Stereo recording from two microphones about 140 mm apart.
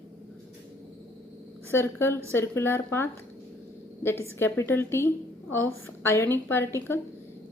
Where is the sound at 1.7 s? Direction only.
15° left (ahead or behind).